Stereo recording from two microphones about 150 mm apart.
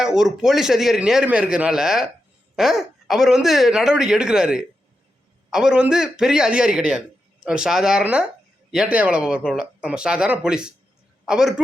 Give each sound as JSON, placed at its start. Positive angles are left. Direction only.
{"t": 0.0, "sound": "a man's voice", "side_deg": -5}